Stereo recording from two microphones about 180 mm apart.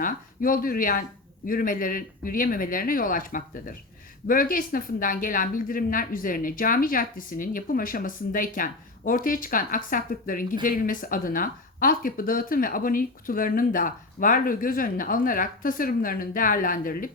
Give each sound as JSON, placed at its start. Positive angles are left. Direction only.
{"t": 0.0, "sound": "a woman's voice", "side_deg": 50}